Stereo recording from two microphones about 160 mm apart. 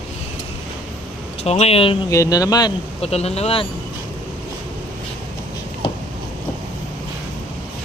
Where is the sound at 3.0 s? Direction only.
40° left (ahead or behind).